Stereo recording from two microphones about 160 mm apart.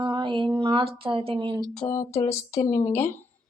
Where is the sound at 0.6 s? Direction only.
30° right (ahead or behind).